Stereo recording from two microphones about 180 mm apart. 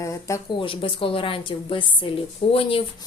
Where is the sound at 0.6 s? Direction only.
30° left (ahead or behind).